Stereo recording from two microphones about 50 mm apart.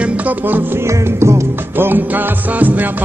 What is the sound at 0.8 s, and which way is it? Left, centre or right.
Music, right.